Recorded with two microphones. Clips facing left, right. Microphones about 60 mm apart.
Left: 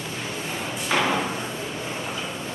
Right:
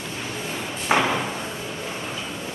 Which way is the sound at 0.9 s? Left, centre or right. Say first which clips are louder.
Right 3 dB; right.